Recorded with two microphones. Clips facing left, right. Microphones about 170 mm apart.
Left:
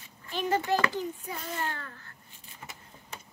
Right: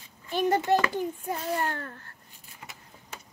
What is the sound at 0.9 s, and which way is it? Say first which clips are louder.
A child's voice: right 4 dB; 50° right (ahead or behind).